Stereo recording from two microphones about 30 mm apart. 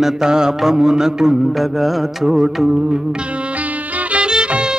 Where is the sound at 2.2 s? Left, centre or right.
Centre.